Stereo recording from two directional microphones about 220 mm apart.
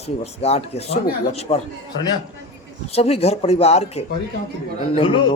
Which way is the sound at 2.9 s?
25° left (ahead or behind).